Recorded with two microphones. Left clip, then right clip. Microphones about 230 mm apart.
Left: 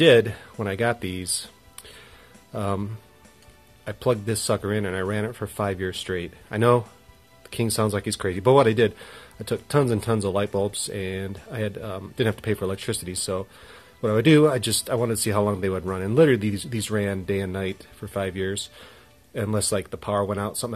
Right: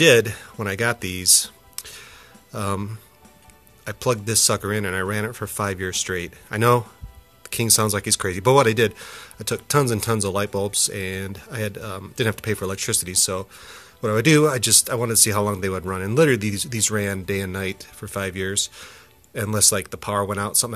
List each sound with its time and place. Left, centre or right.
0.0 s speech: centre
2.5 s speech: centre